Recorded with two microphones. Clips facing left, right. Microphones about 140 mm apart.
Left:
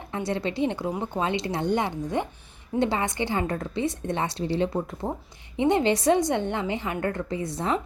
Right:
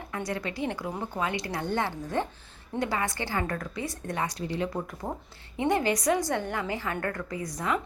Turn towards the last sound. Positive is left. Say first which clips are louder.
# left 3 dB
turn(degrees=30)  # may be behind; listen again after turning